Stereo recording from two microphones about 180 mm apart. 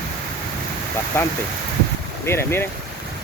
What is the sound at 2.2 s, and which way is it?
Speech, 15° left (ahead or behind).